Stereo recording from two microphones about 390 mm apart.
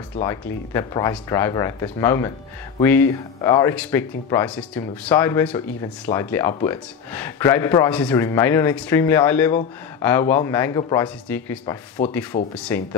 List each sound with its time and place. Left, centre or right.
0.2 s speech: centre